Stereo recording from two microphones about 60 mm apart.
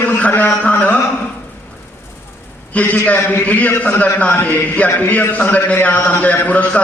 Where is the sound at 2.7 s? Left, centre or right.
Left.